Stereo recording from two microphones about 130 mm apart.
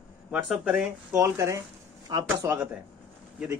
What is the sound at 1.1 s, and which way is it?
Speech, 20° right (ahead or behind).